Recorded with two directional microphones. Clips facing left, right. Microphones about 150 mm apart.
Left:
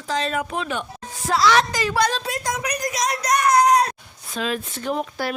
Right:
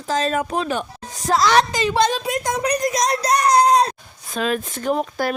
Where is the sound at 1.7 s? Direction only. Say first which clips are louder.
Right 3 dB; 25° right (ahead or behind).